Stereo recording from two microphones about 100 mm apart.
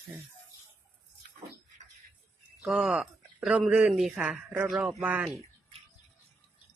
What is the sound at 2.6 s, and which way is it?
Speech, 10° right (ahead or behind).